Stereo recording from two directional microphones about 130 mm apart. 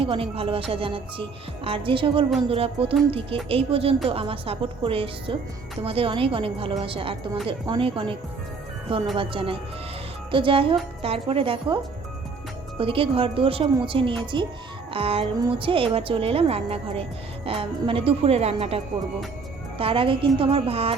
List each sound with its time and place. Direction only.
0.0 s a woman's voice: 45° right (ahead or behind)
9.1 s a woman's voice: 45° right (ahead or behind)
12.8 s a woman's voice: 45° right (ahead or behind)
19.8 s a woman's voice: 45° right (ahead or behind)